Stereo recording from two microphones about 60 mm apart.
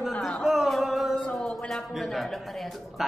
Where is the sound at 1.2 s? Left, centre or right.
Centre.